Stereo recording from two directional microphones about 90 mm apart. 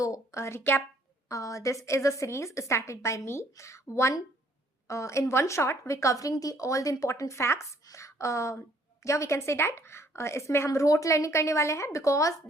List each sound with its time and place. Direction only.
0.0 s speech: 35° left (ahead or behind)
1.3 s a woman's voice: 35° left (ahead or behind)